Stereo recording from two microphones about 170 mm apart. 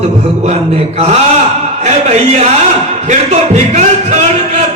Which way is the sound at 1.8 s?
40° right (ahead or behind).